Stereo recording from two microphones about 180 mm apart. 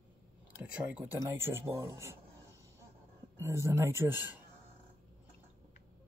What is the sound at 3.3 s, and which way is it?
Speech, 15° right (ahead or behind).